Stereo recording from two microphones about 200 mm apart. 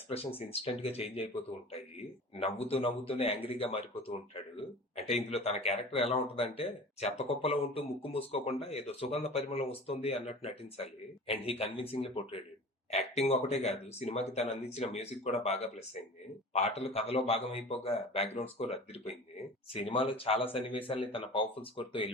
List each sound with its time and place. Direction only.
0.1 s speech: 30° left (ahead or behind)
2.3 s a man's voice: 30° left (ahead or behind)